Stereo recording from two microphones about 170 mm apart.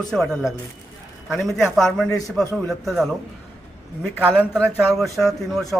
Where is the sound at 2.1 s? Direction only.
20° left (ahead or behind).